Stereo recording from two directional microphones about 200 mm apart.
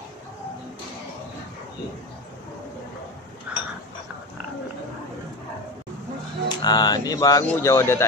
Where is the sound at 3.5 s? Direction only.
5° right (ahead or behind).